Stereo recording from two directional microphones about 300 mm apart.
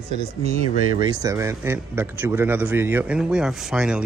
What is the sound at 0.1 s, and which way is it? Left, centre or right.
Speech, right.